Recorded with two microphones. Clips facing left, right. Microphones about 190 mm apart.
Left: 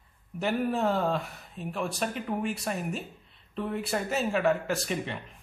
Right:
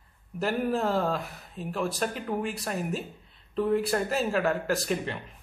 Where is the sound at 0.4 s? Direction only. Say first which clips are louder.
Even; centre (ahead or behind).